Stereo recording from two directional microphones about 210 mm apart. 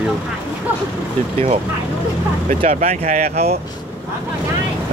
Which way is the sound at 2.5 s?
35° right (ahead or behind).